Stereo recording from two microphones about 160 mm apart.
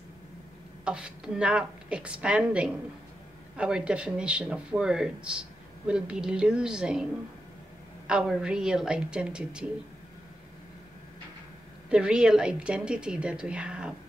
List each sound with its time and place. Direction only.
0.8 s speech: 5° right (ahead or behind)
8.1 s speech: 5° right (ahead or behind)
11.9 s speech: 5° right (ahead or behind)